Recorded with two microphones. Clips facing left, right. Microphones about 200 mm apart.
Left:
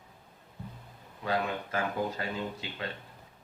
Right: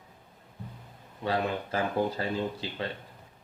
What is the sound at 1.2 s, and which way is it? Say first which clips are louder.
Speech: right 2 dB; 30° right (ahead or behind).